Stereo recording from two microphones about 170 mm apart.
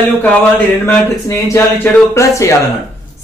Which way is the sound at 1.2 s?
15° left (ahead or behind).